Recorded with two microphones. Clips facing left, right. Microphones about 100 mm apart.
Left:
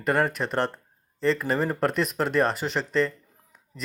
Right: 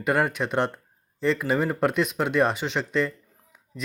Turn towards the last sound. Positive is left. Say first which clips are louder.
# right 4 dB
turn(degrees=-5)  # may be behind; listen again after turning